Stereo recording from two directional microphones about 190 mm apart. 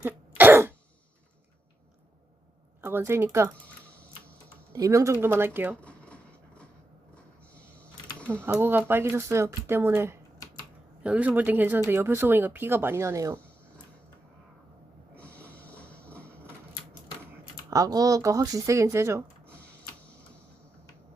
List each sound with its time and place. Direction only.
0.0 s cough: 10° right (ahead or behind)
2.8 s speech: 10° right (ahead or behind)
4.7 s speech: 15° right (ahead or behind)
5.8 s a sound: 5° left (ahead or behind)
8.4 s speech: 10° right (ahead or behind)
15.1 s snort: 5° left (ahead or behind)
17.7 s speech: 20° right (ahead or behind)